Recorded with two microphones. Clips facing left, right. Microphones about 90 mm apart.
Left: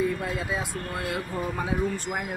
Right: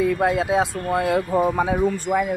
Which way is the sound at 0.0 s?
90° right.